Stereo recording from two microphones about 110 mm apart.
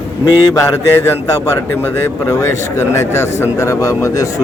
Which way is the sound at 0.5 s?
25° left (ahead or behind).